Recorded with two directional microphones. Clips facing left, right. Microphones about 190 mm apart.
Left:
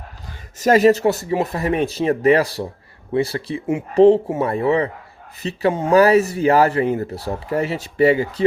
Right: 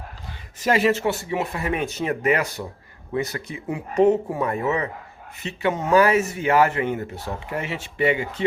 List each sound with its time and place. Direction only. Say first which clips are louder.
0.6 s speech: left 6 dB; 40° left (ahead or behind)